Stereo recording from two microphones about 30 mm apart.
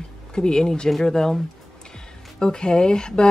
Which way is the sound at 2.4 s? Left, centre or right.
Left.